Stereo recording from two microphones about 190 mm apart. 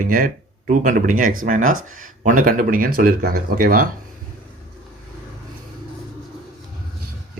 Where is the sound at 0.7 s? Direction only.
45° right (ahead or behind).